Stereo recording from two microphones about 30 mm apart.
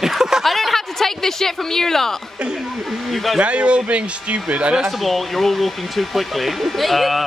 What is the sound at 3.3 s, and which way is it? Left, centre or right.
A man's voice, right.